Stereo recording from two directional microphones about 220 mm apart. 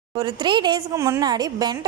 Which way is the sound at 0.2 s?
20° right (ahead or behind).